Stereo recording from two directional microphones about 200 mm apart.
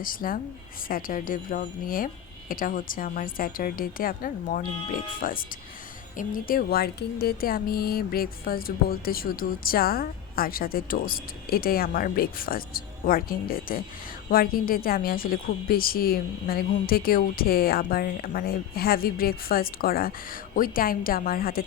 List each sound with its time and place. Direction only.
0.0 s speech: 45° left (ahead or behind)